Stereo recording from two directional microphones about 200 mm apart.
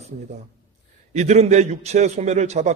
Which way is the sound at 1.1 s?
35° right (ahead or behind).